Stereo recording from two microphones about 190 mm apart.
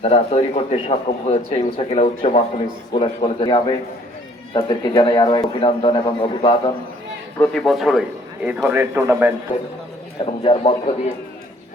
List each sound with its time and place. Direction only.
0.0 s a man's voice: 30° left (ahead or behind)
7.3 s a man's voice: 5° left (ahead or behind); by 9.3 s 10° right (ahead or behind)
9.5 s a man's voice: 25° left (ahead or behind)